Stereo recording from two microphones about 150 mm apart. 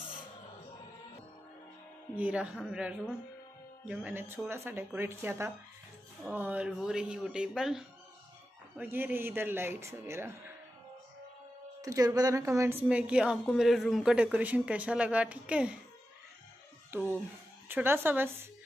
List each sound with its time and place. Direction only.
2.1 s a woman's voice: 10° right (ahead or behind)
11.8 s a woman's voice: 20° right (ahead or behind)
12.8 s a woman's voice: 5° right (ahead or behind)
16.9 s speech: 15° right (ahead or behind)